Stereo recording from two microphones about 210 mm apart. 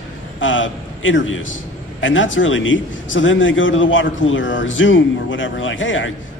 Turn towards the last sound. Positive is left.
turn(degrees=65)  # may be behind; listen again after turning